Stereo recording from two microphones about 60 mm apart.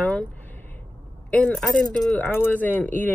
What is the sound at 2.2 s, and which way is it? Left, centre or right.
Speech, left.